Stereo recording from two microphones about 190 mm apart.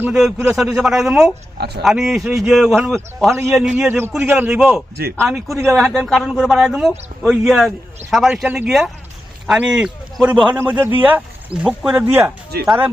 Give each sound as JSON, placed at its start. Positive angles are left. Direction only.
{"t": 0.0, "sound": "speech", "side_deg": -5}
{"t": 1.5, "sound": "speech", "side_deg": -60}
{"t": 1.8, "sound": "speech", "side_deg": -5}
{"t": 3.8, "sound": "speech", "side_deg": -10}